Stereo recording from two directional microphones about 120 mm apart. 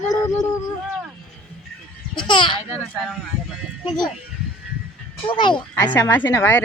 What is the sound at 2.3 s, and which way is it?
Speech, 40° left (ahead or behind).